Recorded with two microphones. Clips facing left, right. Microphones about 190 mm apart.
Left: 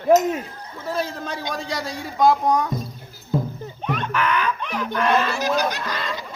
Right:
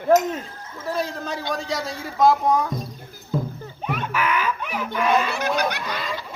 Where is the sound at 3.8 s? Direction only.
5° right (ahead or behind).